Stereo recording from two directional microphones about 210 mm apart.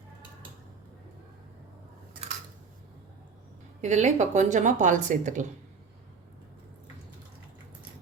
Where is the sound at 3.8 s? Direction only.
35° right (ahead or behind).